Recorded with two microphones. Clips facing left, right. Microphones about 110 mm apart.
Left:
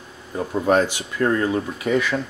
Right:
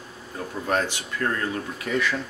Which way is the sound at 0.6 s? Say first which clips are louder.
Left 7 dB; 15° left (ahead or behind).